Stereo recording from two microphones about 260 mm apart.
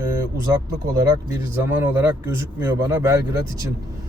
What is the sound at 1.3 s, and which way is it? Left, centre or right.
Speech, centre.